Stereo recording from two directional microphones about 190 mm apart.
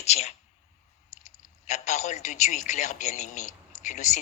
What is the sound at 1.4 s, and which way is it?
Speech, 35° left (ahead or behind).